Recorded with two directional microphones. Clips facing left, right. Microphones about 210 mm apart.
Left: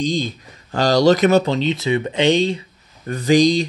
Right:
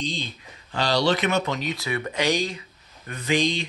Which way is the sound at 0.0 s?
45° left (ahead or behind).